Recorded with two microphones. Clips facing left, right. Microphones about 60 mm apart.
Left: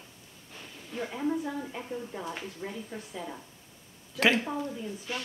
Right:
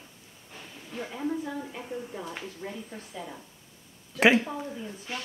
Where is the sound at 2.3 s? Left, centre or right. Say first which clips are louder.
Even; centre.